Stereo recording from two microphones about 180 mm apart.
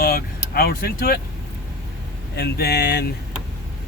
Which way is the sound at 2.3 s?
60° left (ahead or behind).